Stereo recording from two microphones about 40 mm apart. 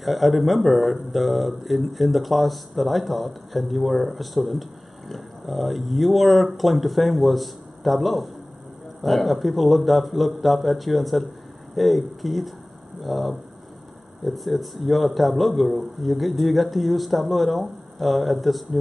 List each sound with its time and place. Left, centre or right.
0.0 s speech: centre